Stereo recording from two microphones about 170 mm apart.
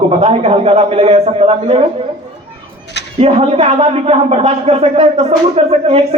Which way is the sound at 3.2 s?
40° right (ahead or behind).